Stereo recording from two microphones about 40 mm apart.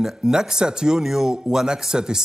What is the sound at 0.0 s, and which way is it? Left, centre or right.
A man's voice, centre.